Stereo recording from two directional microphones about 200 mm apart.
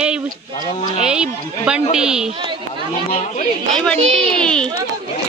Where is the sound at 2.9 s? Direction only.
35° left (ahead or behind).